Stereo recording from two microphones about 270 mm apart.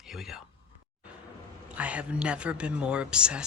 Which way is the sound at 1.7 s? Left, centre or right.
Centre.